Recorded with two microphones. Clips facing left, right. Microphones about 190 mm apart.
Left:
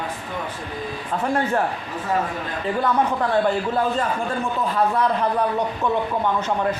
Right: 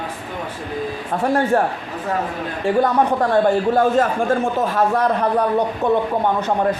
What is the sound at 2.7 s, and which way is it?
Speech, 85° right.